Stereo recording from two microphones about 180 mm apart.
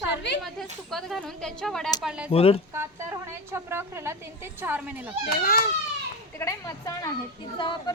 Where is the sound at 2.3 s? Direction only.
30° left (ahead or behind).